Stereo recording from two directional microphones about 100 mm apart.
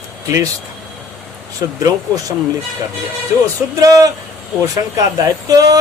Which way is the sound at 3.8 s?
35° right (ahead or behind).